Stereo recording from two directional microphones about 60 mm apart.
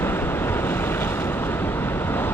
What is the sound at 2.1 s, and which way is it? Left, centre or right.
Vehicle, left.